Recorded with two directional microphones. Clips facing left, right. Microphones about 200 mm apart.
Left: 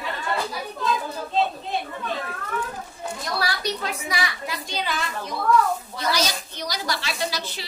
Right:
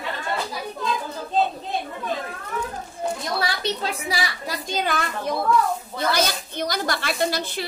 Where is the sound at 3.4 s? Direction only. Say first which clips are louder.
Right 1 dB; 30° right (ahead or behind).